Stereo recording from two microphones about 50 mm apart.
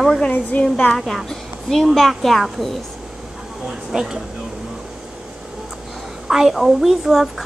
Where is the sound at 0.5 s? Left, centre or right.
Left.